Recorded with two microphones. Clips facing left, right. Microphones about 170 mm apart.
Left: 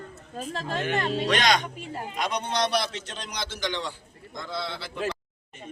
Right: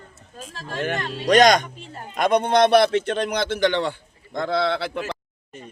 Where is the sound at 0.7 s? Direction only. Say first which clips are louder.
Right 1 dB; 45° right (ahead or behind); by 5.0 s 65° right (ahead or behind).